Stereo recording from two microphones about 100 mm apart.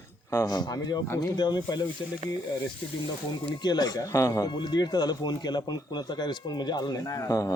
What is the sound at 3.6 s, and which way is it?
Speech, 45° left (ahead or behind).